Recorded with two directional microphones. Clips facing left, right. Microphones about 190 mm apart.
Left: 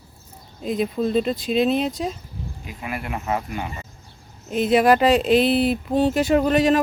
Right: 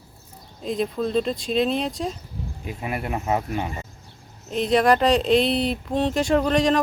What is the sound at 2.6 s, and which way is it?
Speech, 30° right (ahead or behind).